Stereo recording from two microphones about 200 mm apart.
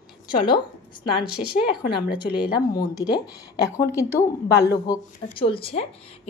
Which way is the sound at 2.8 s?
20° left (ahead or behind).